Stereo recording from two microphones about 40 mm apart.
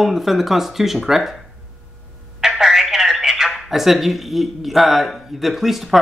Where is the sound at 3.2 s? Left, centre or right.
Centre.